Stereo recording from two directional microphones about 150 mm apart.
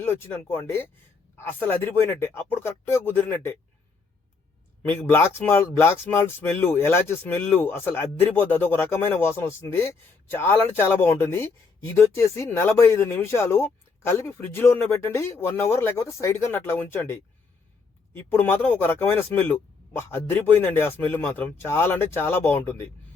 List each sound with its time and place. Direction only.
0.0 s speech: 15° left (ahead or behind)
5.0 s speech: 15° left (ahead or behind)